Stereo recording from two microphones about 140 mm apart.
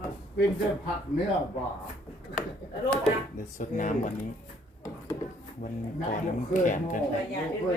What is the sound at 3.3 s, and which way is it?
Speech, 65° left (ahead or behind).